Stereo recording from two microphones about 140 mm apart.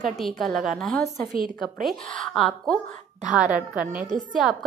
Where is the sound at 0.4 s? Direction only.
Centre (ahead or behind).